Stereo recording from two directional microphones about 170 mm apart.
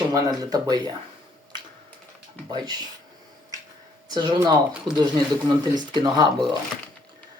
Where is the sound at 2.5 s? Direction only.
25° right (ahead or behind).